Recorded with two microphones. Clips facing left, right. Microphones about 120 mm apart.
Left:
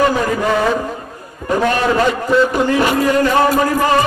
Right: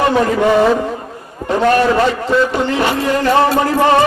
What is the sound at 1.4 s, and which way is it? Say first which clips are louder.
Speech: right 1 dB; 35° right (ahead or behind).